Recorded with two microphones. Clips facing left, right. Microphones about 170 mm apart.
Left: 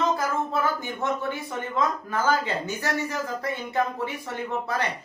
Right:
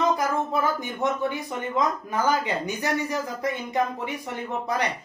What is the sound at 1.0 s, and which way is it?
Speech, 15° right (ahead or behind).